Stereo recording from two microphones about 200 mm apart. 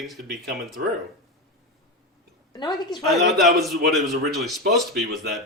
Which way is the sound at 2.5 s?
20° left (ahead or behind).